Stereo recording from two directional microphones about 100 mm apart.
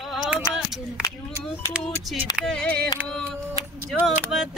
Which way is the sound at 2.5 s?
10° left (ahead or behind).